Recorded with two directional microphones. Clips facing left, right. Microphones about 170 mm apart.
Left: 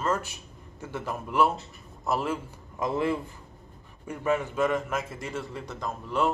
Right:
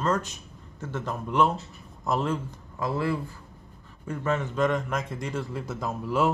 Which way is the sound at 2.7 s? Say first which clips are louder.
Left 1 dB; 20° left (ahead or behind).